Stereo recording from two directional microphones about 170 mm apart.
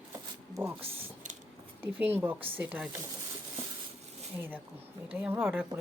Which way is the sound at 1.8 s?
10° right (ahead or behind).